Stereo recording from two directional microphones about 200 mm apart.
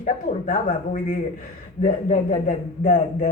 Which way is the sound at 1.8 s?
40° left (ahead or behind).